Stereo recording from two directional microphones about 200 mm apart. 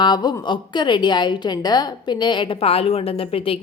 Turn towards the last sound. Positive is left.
turn(degrees=30)  # may be behind; listen again after turning